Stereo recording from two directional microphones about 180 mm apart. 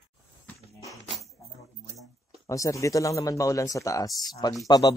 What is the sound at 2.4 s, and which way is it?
Speech, 15° left (ahead or behind).